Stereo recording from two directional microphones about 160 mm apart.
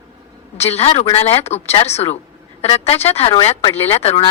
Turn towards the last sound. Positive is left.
turn(degrees=40)  # may be behind; listen again after turning